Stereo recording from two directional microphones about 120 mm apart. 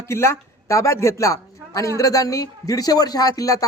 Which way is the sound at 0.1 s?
20° left (ahead or behind).